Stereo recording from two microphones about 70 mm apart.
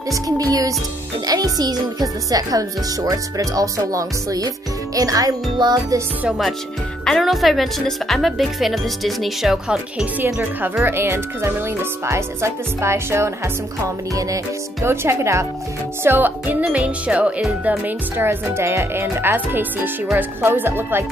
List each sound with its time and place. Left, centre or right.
0.1 s speech: right
5.6 s music: right
7.1 s speech: centre
10.2 s speech: right
14.1 s speech: right
16.0 s music: right
16.7 s speech: centre
17.6 s speech: right
19.3 s music: right
20.2 s speech: right